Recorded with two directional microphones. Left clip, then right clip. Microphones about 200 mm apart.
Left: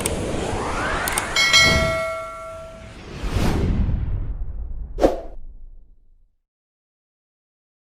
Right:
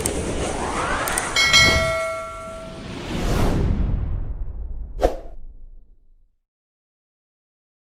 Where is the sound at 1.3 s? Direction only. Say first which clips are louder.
Even; centre (ahead or behind).